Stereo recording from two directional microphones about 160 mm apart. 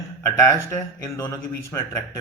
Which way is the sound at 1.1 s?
20° left (ahead or behind).